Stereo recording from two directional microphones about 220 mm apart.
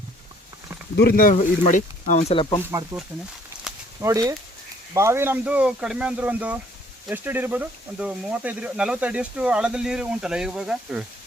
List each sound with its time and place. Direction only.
0.9 s speech: 45° left (ahead or behind); by 2.6 s 25° left (ahead or behind)
2.6 s speech: 10° right (ahead or behind)
4.0 s speech: 15° right (ahead or behind)